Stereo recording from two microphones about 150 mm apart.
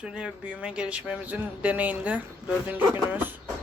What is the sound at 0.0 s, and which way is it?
Speech, 5° right (ahead or behind).